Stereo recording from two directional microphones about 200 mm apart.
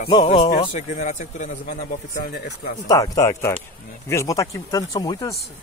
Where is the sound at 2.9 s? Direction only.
15° left (ahead or behind).